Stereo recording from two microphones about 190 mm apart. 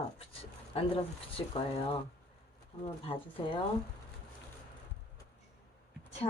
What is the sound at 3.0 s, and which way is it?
Speech, 25° left (ahead or behind).